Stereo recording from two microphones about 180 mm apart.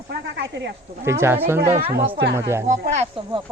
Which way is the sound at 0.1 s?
70° right (ahead or behind).